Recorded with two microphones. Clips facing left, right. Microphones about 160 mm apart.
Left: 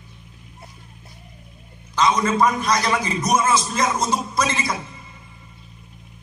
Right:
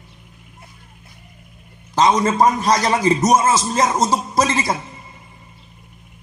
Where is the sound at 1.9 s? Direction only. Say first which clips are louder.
Right 4 dB; 40° right (ahead or behind).